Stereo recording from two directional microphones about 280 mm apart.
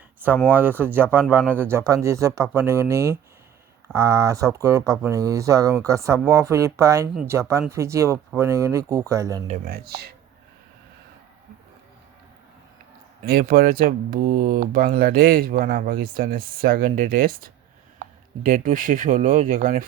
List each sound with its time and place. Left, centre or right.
0.2 s speech: centre
9.5 s speech: right
13.2 s speech: right